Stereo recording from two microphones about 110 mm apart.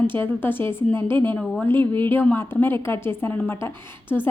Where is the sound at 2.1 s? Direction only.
20° left (ahead or behind).